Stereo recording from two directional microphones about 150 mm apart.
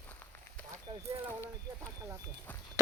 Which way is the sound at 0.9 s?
40° right (ahead or behind).